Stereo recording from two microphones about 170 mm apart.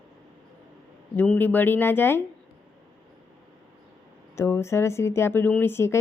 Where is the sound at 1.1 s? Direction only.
10° left (ahead or behind).